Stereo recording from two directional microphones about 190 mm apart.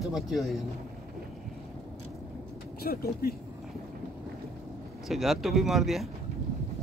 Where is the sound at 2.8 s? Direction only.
55° left (ahead or behind).